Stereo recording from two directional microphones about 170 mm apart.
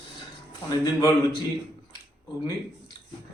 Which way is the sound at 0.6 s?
20° left (ahead or behind).